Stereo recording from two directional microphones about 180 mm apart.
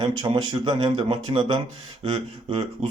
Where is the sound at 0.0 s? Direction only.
25° right (ahead or behind).